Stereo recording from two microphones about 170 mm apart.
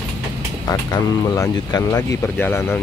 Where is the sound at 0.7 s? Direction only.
20° left (ahead or behind).